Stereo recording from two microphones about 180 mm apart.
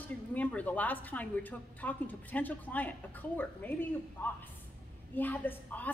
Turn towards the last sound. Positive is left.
turn(degrees=10)  # may be behind; listen again after turning